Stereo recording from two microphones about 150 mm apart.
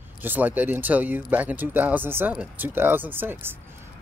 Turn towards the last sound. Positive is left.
turn(degrees=-15)  # may be behind; listen again after turning